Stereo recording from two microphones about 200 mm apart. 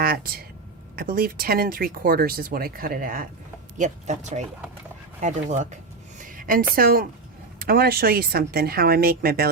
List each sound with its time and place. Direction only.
0.0 s speech: 50° right (ahead or behind)
6.1 s a sound: 45° right (ahead or behind)
6.7 s speech: 45° right (ahead or behind)